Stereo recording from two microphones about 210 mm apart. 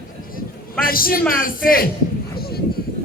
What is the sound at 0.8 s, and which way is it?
Speech, 45° left (ahead or behind).